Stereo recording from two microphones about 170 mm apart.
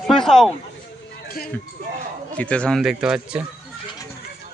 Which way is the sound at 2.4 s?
5° left (ahead or behind).